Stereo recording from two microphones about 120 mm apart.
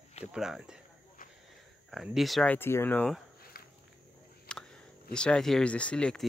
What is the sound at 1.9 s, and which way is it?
Speech, centre (ahead or behind).